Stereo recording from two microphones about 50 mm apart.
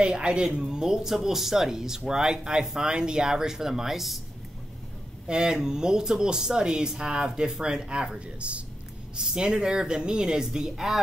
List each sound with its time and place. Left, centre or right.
0.0 s speech: right; by 4.2 s centre
5.3 s speech: centre